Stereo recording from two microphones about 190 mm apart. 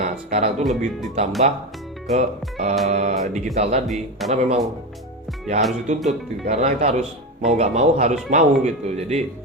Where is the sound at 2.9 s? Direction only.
35° right (ahead or behind).